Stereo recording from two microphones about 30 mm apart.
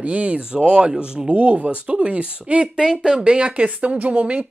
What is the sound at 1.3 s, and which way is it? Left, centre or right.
Speech, right.